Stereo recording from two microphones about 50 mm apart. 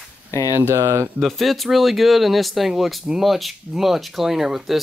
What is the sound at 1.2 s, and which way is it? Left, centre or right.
Speech, centre.